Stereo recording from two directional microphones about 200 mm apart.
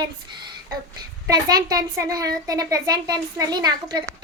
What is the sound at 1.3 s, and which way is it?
Child singing, 20° right (ahead or behind).